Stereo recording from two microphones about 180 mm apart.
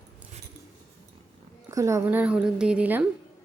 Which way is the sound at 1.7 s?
15° right (ahead or behind).